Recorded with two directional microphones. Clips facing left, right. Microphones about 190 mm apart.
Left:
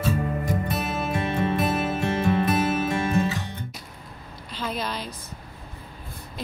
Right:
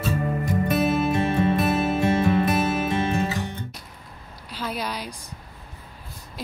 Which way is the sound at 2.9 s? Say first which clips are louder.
Right 1 dB; 20° right (ahead or behind).